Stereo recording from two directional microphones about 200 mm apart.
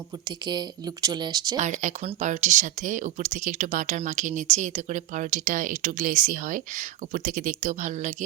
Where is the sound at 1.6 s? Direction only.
35° right (ahead or behind).